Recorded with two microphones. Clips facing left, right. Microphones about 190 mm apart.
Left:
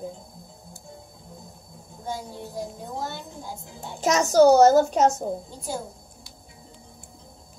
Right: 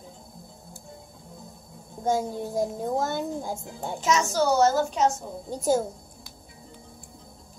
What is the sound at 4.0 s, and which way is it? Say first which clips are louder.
A woman's voice: left 7 dB; 40° left (ahead or behind).